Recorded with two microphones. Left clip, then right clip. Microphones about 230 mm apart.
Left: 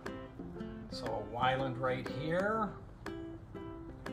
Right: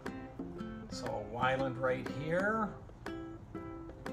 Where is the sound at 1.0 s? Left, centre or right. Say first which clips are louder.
Left 1 dB; centre.